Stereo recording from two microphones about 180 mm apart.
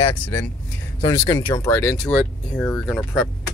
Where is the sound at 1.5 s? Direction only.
10° left (ahead or behind).